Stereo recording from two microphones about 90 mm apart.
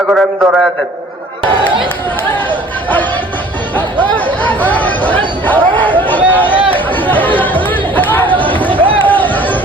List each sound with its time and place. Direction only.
0.1 s a man's voice: centre (ahead or behind)
4.4 s chatter: 20° left (ahead or behind)